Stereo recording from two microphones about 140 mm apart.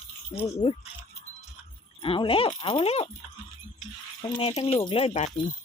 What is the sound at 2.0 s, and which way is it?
Speech, 40° left (ahead or behind).